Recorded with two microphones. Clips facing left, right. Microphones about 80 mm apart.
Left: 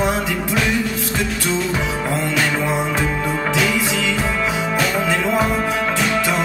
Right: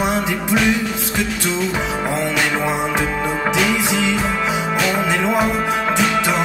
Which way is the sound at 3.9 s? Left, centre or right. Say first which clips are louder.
Right 2 dB; centre.